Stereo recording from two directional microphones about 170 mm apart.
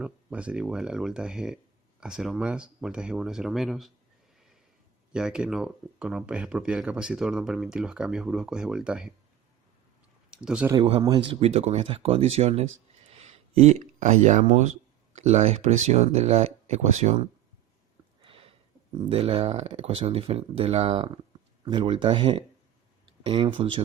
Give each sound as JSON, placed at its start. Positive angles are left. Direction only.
{"t": 0.0, "sound": "speech", "side_deg": -5}
{"t": 5.1, "sound": "speech", "side_deg": -5}
{"t": 10.3, "sound": "speech", "side_deg": -5}
{"t": 11.3, "sound": "speech", "side_deg": -35}
{"t": 13.1, "sound": "a sound", "side_deg": -40}
{"t": 15.1, "sound": "speech", "side_deg": -40}
{"t": 18.2, "sound": "a sound", "side_deg": -35}
{"t": 19.0, "sound": "speech", "side_deg": -35}